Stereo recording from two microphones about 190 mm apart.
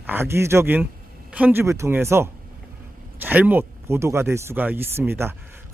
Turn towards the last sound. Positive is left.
turn(degrees=-10)  # may be behind; listen again after turning